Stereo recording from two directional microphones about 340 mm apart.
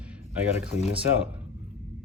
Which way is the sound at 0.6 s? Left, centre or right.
Centre.